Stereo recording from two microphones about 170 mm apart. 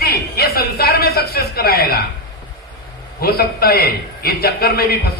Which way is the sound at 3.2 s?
65° left (ahead or behind).